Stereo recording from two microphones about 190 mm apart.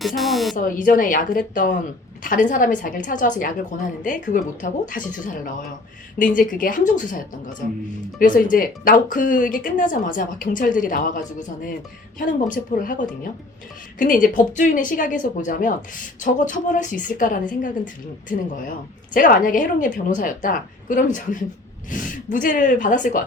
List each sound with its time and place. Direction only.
0.2 s speech: centre (ahead or behind)
0.5 s speech: 45° left (ahead or behind)